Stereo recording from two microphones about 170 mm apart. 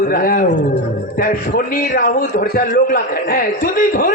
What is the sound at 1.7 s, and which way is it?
A man's voice, 50° left (ahead or behind).